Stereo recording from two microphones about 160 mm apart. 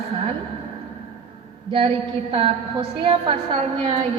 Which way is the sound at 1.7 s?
35° right (ahead or behind).